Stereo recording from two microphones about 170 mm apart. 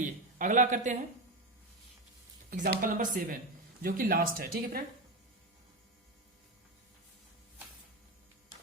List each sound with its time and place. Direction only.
0.0 s speech: 45° right (ahead or behind)
2.5 s speech: 60° right (ahead or behind)